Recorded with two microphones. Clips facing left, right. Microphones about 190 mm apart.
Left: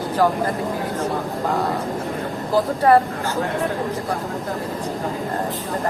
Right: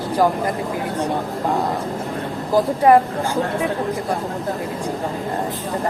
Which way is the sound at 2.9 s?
20° right (ahead or behind).